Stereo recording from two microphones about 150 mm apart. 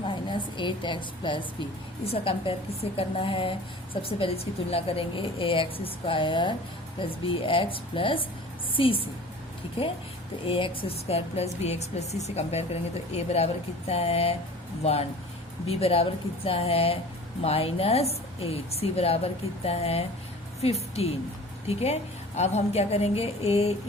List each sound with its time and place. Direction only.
0.0 s a sound: 35° left (ahead or behind)
2.0 s a woman's voice: 40° left (ahead or behind)
10.4 s a woman's voice: 40° left (ahead or behind)
15.7 s a woman's voice: 40° left (ahead or behind)
22.4 s a woman's voice: 45° left (ahead or behind)